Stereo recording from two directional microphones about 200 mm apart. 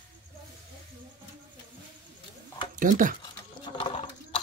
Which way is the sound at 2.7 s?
40° right (ahead or behind).